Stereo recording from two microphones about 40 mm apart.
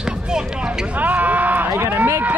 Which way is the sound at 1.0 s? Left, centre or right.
Right.